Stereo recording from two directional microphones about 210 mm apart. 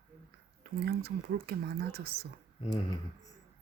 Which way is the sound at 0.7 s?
50° right (ahead or behind).